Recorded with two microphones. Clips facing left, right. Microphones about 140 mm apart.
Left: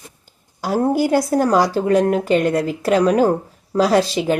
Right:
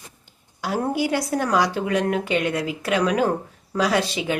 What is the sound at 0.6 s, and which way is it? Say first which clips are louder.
Speech: left 6 dB; 40° left (ahead or behind).